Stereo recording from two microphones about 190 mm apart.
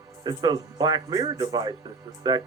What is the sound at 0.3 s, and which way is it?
Speech, 20° right (ahead or behind).